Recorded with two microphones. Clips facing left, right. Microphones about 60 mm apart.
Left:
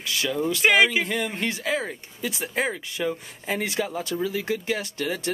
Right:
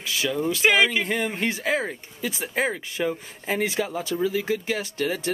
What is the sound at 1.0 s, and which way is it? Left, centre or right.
Speech, centre.